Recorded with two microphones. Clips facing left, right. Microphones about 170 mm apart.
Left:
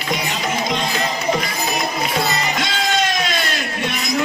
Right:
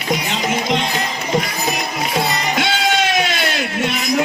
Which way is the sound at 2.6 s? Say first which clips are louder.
Right 5 dB; 65° right (ahead or behind).